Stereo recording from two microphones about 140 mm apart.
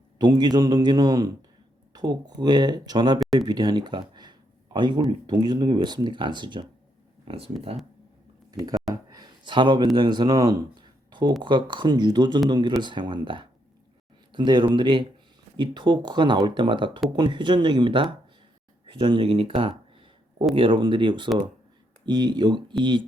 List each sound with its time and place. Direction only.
0.2 s a man's voice: 30° right (ahead or behind)
8.5 s speech: 25° right (ahead or behind)
8.9 s a sound: 30° right (ahead or behind)
11.4 s speech: 35° right (ahead or behind)
18.9 s a sound: 35° right (ahead or behind)
20.6 s speech: 35° right (ahead or behind)